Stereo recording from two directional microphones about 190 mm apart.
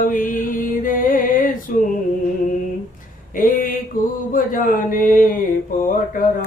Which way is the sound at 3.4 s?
45° left (ahead or behind).